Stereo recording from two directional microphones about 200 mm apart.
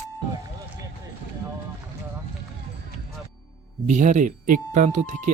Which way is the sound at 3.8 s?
35° right (ahead or behind).